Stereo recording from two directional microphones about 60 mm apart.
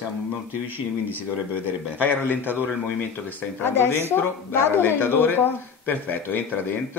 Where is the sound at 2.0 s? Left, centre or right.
Left.